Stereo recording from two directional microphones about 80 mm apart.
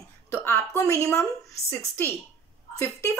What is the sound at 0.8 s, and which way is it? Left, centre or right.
Speech, left.